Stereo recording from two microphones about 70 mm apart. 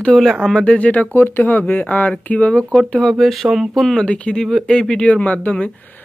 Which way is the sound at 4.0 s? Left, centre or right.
Centre.